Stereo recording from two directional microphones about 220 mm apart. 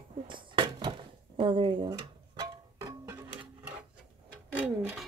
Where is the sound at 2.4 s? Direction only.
15° right (ahead or behind).